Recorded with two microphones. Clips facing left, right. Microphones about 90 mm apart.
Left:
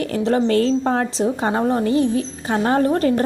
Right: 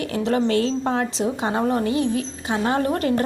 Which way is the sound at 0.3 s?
35° left (ahead or behind).